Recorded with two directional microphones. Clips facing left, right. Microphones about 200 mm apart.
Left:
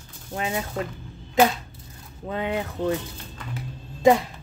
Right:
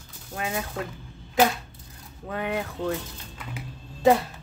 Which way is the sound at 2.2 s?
20° left (ahead or behind).